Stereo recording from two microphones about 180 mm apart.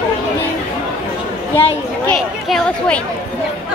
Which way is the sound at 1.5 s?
10° left (ahead or behind).